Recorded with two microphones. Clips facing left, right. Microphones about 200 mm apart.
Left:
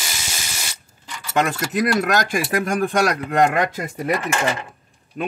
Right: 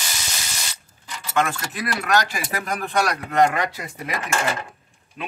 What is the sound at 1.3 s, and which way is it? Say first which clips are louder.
Speech: left 4 dB; 40° left (ahead or behind).